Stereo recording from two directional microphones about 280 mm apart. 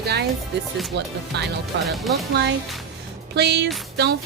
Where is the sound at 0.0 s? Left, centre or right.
Right.